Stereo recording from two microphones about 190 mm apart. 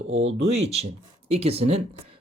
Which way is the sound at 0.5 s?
35° right (ahead or behind).